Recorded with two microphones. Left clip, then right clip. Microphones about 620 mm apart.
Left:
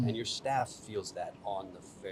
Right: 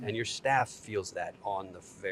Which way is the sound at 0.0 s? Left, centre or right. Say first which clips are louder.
Right 3 dB; right.